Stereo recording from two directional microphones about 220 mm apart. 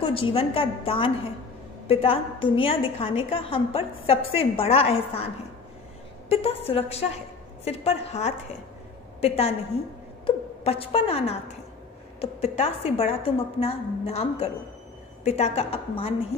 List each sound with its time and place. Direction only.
0.0 s a woman's voice: 25° left (ahead or behind)